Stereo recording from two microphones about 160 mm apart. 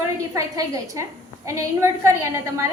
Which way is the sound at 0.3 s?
20° right (ahead or behind).